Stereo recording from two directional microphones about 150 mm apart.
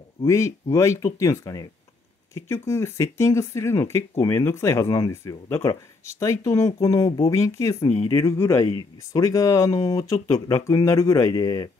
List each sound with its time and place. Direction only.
0.2 s speech: 20° left (ahead or behind)